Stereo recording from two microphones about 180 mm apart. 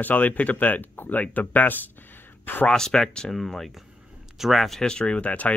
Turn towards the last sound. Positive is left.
turn(degrees=5)  # may be behind; listen again after turning